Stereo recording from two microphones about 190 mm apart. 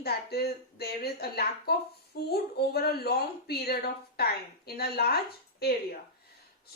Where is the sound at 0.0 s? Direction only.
55° left (ahead or behind).